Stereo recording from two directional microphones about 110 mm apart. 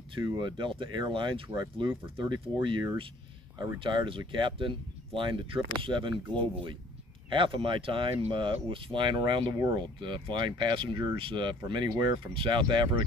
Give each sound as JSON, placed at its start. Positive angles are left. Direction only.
{"t": 0.1, "sound": "speech", "side_deg": -45}